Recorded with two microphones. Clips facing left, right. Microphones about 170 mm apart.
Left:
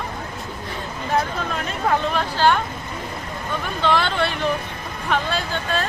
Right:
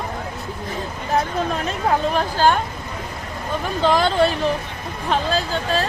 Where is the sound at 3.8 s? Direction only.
40° right (ahead or behind).